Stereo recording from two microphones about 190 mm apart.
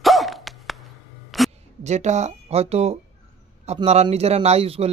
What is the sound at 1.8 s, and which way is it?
Speech, 35° right (ahead or behind).